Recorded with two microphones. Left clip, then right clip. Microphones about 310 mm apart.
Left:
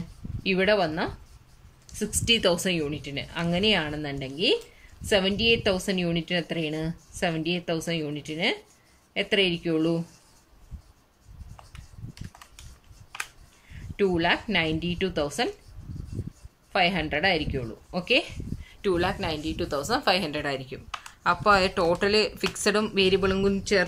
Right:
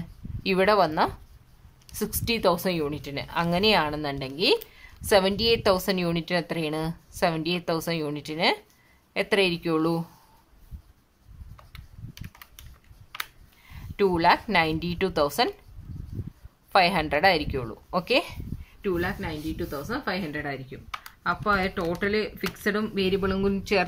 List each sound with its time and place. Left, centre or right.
0.4 s a woman's voice: centre
14.1 s a woman's voice: centre
16.7 s a woman's voice: centre
18.8 s speech: centre
19.5 s a woman's voice: left
19.9 s speech: centre